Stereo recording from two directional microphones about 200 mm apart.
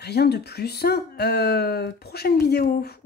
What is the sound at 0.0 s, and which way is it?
Speech, 55° left (ahead or behind).